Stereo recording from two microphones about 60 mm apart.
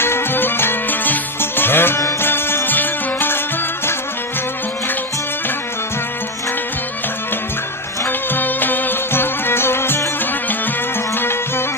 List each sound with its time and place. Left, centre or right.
0.0 s music: left
8.0 s music: left
11.1 s music: left